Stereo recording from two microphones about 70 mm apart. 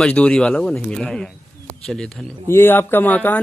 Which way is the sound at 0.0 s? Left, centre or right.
Centre.